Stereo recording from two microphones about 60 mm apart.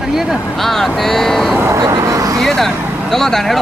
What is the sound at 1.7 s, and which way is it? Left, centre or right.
Speech, right.